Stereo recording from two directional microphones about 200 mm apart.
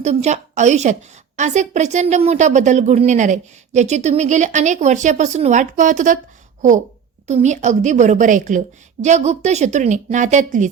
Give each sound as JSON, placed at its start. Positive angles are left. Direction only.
{"t": 0.0, "sound": "a woman's voice", "side_deg": -35}